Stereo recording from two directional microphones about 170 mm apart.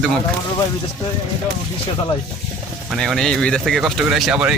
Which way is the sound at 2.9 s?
Centre (ahead or behind).